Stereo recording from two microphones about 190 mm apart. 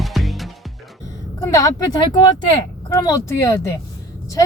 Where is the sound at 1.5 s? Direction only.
20° left (ahead or behind).